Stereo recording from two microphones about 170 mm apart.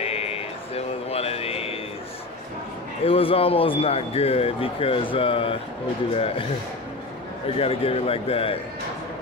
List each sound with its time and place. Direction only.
0.0 s music: 35° left (ahead or behind)
3.0 s speech: 35° left (ahead or behind)
7.5 s speech: 35° left (ahead or behind)